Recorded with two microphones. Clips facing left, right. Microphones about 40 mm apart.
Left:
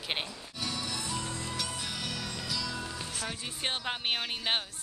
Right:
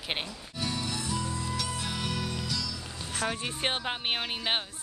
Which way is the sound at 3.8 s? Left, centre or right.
Centre.